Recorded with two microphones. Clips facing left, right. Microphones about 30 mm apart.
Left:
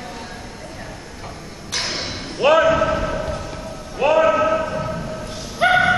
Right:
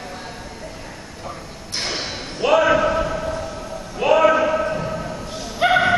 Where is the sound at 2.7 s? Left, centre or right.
Centre.